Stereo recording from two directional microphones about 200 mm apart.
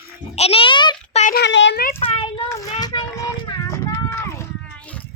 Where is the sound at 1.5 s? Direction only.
65° left (ahead or behind).